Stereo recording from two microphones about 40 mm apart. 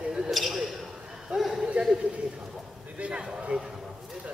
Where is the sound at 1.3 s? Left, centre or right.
Centre.